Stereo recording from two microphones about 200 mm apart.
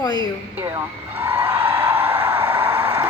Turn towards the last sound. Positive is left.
turn(degrees=-10)  # may be behind; listen again after turning